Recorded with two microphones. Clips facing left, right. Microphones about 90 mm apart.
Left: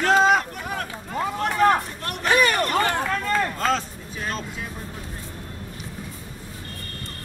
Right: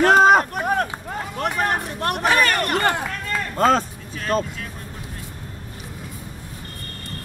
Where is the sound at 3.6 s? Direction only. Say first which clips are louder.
Right 6 dB; 45° right (ahead or behind).